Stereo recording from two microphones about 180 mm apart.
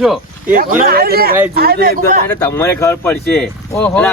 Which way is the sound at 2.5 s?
15° left (ahead or behind).